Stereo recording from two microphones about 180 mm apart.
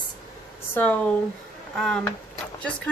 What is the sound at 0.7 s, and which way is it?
Speech, 10° left (ahead or behind).